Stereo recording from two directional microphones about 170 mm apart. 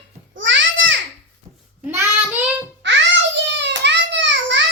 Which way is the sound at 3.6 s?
90° right.